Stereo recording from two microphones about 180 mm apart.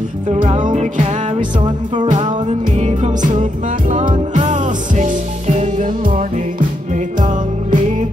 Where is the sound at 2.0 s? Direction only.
40° right (ahead or behind).